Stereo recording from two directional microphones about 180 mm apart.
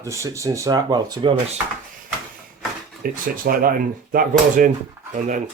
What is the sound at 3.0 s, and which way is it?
Speech, 50° right (ahead or behind).